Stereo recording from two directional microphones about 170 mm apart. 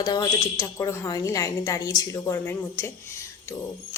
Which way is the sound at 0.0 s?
25° left (ahead or behind).